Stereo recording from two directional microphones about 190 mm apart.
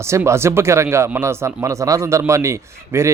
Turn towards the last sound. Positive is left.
turn(degrees=-15)  # may be behind; listen again after turning